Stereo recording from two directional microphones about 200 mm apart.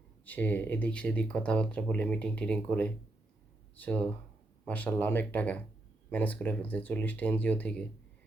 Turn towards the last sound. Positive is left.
turn(degrees=5)  # may be behind; listen again after turning